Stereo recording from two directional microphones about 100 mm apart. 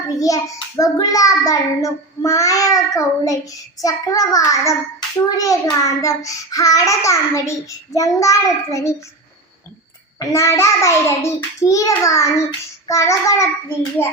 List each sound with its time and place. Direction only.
0.1 s child singing: 35° left (ahead or behind)
10.2 s child singing: 30° left (ahead or behind)